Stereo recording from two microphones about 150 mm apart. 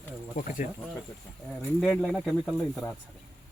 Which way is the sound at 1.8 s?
Centre (ahead or behind).